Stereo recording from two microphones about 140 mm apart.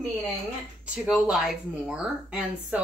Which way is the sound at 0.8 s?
5° right (ahead or behind).